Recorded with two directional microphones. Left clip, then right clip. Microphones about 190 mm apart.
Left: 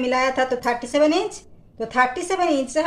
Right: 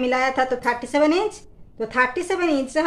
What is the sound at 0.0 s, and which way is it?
A woman's voice, 20° right (ahead or behind).